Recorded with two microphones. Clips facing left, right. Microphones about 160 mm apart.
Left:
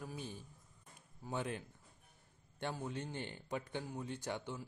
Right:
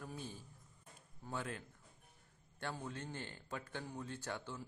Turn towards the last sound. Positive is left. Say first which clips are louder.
# left 3 dB
turn(degrees=15)  # may be behind; listen again after turning